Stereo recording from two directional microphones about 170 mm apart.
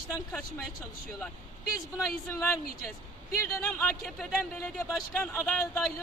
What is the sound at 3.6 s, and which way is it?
A woman's voice, 5° left (ahead or behind).